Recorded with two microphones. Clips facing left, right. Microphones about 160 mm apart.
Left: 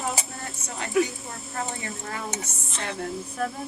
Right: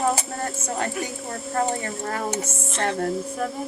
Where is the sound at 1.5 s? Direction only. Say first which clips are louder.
Right 8 dB; 50° right (ahead or behind).